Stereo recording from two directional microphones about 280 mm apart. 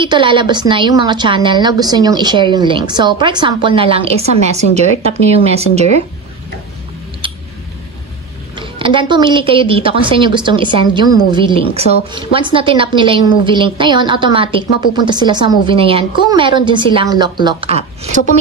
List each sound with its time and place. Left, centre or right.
0.0 s a woman's voice: centre
8.5 s a woman's voice: centre